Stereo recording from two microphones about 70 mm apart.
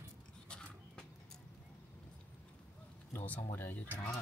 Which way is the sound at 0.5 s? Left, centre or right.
Centre.